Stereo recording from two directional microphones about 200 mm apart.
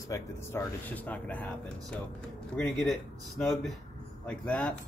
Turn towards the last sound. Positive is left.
turn(degrees=5)  # may be behind; listen again after turning